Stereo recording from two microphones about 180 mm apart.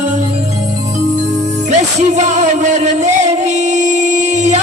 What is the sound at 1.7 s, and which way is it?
Music, 40° right (ahead or behind).